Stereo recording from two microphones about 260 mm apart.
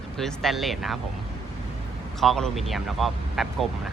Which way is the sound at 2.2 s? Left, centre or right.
Centre.